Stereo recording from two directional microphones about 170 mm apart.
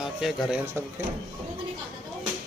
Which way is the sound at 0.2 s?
5° right (ahead or behind).